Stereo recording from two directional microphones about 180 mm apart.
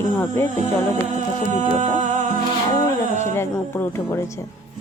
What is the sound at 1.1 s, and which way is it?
Music, 40° right (ahead or behind).